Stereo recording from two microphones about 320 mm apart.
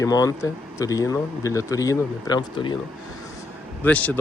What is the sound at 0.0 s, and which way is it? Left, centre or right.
Speech, centre.